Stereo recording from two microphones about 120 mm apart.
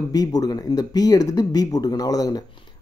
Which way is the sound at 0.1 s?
30° left (ahead or behind).